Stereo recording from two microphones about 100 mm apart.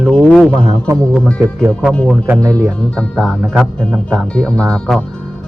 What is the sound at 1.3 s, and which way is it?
Speech, 30° right (ahead or behind).